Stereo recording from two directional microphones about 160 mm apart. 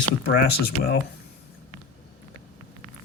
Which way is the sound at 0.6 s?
90° left.